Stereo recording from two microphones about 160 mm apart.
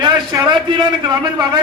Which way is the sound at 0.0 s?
25° right (ahead or behind).